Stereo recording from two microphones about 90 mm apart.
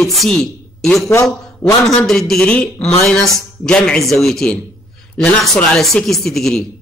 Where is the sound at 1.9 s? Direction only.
5° left (ahead or behind).